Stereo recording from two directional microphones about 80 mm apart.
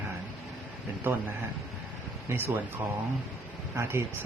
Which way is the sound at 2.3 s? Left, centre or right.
Right.